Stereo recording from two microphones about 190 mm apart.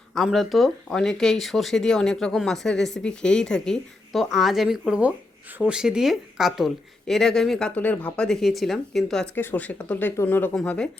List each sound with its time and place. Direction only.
0.1 s speech: centre (ahead or behind)